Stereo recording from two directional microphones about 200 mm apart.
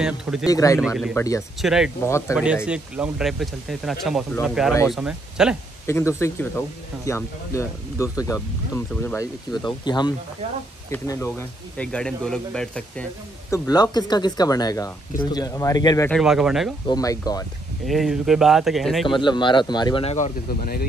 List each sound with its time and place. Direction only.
0.0 s speech: 5° right (ahead or behind)
0.5 s speech: 15° left (ahead or behind)
0.7 s speech: centre (ahead or behind)
1.1 s speech: 15° left (ahead or behind)
1.6 s speech: centre (ahead or behind)
2.0 s speech: 15° left (ahead or behind)
2.3 s speech: 5° right (ahead or behind)
5.9 s speech: 15° left (ahead or behind)
13.5 s speech: 20° left (ahead or behind)
16.1 s speech: centre (ahead or behind)
16.8 s speech: 20° left (ahead or behind)
17.8 s speech: centre (ahead or behind)
19.0 s speech: 25° left (ahead or behind)